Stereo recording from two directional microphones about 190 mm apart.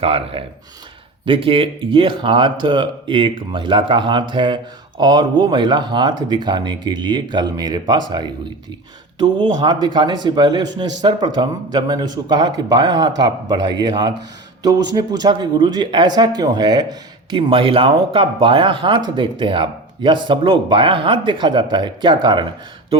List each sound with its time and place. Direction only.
0.0 s speech: 30° right (ahead or behind)